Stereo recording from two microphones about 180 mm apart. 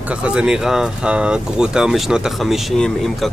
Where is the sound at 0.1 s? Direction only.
5° right (ahead or behind).